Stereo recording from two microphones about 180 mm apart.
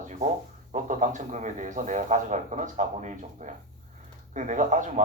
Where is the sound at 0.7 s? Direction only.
45° right (ahead or behind).